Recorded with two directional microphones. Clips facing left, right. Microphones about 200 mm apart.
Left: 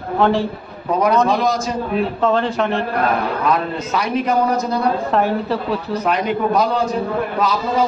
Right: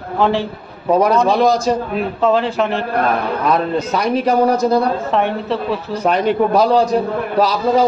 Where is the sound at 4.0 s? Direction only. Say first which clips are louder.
Right 3 dB; 35° right (ahead or behind).